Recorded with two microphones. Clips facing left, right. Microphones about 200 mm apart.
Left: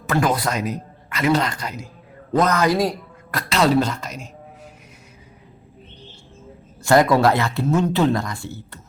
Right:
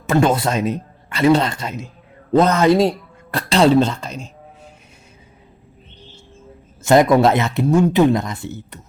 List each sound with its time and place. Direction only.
0.1 s speech: 25° right (ahead or behind)
6.8 s speech: 20° right (ahead or behind)